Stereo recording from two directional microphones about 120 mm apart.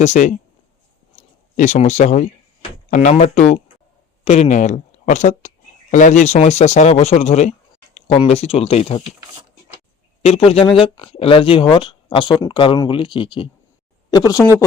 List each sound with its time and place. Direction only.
0.0 s speech: 85° left
1.5 s speech: 90° left; by 7.5 s 70° left (ahead or behind)
7.9 s a sound: 60° left (ahead or behind)
8.3 s speech: 60° left (ahead or behind)
10.2 s speech: 55° left (ahead or behind)
14.1 s speech: 30° left (ahead or behind)